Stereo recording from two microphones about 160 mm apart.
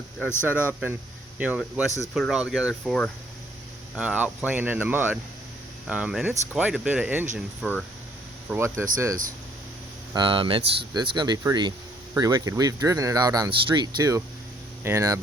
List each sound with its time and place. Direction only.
0.2 s speech: 15° left (ahead or behind)
0.4 s speech: 10° right (ahead or behind)
3.9 s speech: 5° right (ahead or behind)
7.6 s speech: 5° left (ahead or behind)
8.4 s speech: 15° right (ahead or behind)
10.2 s speech: 30° right (ahead or behind)